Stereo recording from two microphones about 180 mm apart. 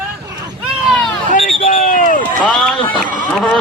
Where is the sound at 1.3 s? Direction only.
50° left (ahead or behind).